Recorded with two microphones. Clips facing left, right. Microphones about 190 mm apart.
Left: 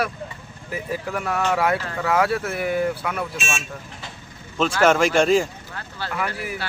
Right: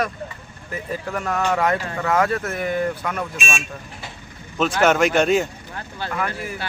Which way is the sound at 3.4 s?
15° right (ahead or behind).